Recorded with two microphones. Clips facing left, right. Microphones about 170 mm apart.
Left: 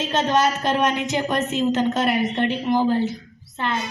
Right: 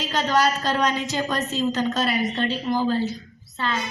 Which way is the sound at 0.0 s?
25° left (ahead or behind).